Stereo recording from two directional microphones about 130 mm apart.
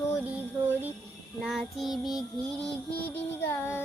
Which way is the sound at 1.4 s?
Centre (ahead or behind).